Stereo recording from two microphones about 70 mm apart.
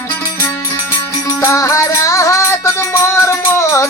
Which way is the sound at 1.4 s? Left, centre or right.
Left.